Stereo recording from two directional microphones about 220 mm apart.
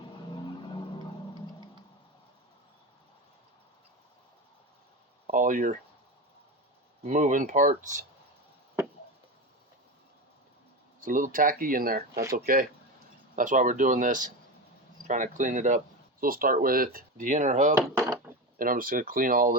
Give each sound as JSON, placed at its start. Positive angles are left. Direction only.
{"t": 5.2, "sound": "speech", "side_deg": -35}
{"t": 7.1, "sound": "speech", "side_deg": -35}
{"t": 11.0, "sound": "speech", "side_deg": -40}
{"t": 17.7, "sound": "wood", "side_deg": -15}
{"t": 18.6, "sound": "speech", "side_deg": -40}